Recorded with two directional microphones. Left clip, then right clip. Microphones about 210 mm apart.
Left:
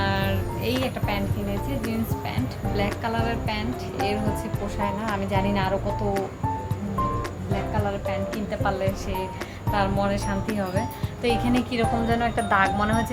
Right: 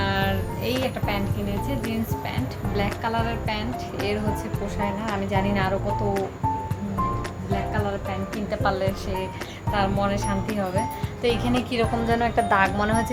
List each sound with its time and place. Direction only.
0.0 s music: 5° right (ahead or behind)
2.7 s speech: 10° right (ahead or behind)
4.8 s speech: 5° right (ahead or behind)
9.7 s speech: 5° right (ahead or behind)